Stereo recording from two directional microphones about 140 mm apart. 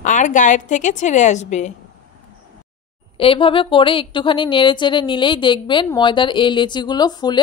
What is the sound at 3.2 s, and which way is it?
Speech, 40° left (ahead or behind).